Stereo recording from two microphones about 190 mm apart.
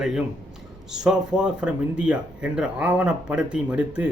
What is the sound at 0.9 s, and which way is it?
A man's voice, 5° right (ahead or behind).